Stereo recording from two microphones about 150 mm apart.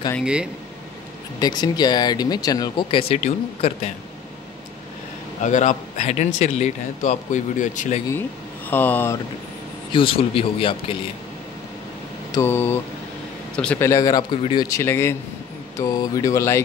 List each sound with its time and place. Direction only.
0.2 s speech: 5° right (ahead or behind)
1.4 s speech: 30° left (ahead or behind); by 3.9 s 45° left (ahead or behind)
5.4 s speech: 55° left (ahead or behind)
8.6 s speech: 10° left (ahead or behind)
9.9 s speech: 35° left (ahead or behind)
12.3 s speech: 15° left (ahead or behind)
13.8 s speech: 25° left (ahead or behind)